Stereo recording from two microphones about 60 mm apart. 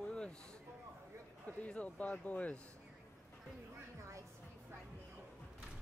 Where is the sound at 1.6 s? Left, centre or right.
Left.